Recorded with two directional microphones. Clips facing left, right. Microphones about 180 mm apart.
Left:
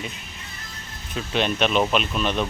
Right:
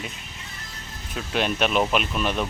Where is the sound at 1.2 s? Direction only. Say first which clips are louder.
Left 1 dB; 5° right (ahead or behind).